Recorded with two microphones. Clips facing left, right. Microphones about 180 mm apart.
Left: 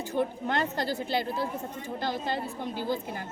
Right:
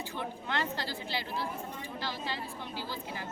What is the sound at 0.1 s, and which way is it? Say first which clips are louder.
A woman's voice: left 11 dB; 45° left (ahead or behind).